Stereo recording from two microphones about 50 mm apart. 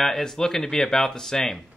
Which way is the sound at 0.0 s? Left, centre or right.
Centre.